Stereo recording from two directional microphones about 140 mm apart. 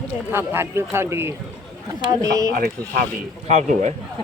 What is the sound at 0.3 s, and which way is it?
A man's voice, 15° right (ahead or behind).